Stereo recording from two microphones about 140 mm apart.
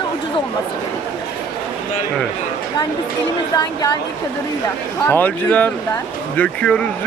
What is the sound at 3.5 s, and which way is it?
Speech, 30° left (ahead or behind).